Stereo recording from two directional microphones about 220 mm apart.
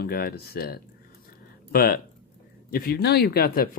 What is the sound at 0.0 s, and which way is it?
Speech, 45° left (ahead or behind).